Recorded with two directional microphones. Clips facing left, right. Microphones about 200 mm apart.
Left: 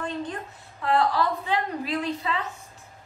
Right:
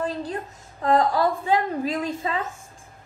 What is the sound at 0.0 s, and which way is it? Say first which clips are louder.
A woman's voice: right 3 dB; 35° right (ahead or behind).